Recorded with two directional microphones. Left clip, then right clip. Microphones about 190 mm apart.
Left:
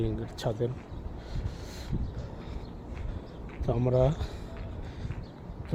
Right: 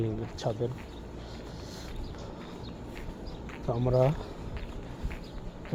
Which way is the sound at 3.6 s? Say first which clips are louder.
Left 1 dB; 30° left (ahead or behind).